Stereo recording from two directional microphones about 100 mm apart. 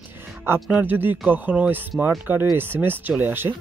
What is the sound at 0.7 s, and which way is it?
Speech, 20° right (ahead or behind).